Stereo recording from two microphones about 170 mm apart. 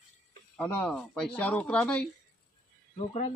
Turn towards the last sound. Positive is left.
turn(degrees=40)  # may be behind; listen again after turning